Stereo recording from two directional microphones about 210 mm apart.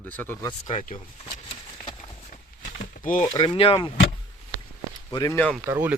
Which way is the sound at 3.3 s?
25° left (ahead or behind).